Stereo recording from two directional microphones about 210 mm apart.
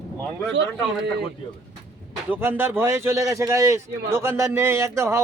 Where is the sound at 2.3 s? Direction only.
10° right (ahead or behind).